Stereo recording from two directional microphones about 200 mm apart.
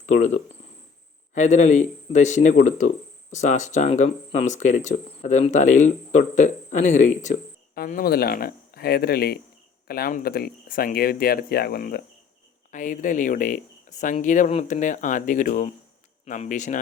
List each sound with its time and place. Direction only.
0.0 s speech: 35° left (ahead or behind)